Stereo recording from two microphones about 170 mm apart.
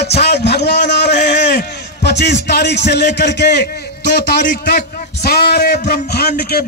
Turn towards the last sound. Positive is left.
turn(degrees=70)  # may be behind; listen again after turning